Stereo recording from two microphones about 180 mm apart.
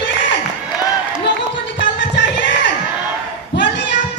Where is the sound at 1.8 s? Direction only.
80° left.